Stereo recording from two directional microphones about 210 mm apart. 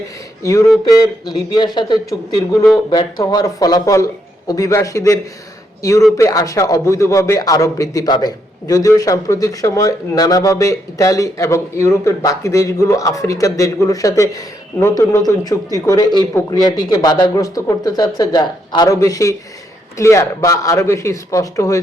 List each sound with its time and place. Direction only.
0.4 s speech: 15° left (ahead or behind)